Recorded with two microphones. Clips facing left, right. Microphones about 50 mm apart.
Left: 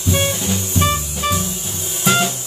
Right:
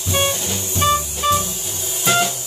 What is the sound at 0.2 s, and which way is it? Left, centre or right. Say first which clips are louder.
Music: left 1 dB; centre.